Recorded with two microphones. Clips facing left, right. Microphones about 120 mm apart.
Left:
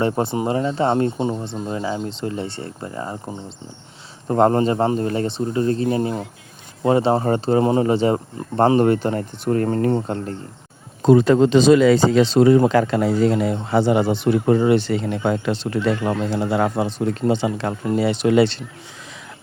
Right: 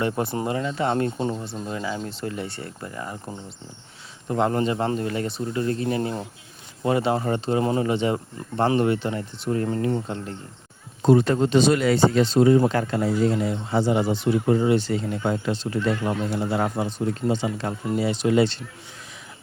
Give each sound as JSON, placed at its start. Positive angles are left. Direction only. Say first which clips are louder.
{"t": 0.0, "sound": "speech", "louder": "left 4 dB", "side_deg": 25}
{"t": 4.3, "sound": "speech", "louder": "left 6 dB", "side_deg": 45}
{"t": 11.3, "sound": "speech", "louder": "left 6 dB", "side_deg": 90}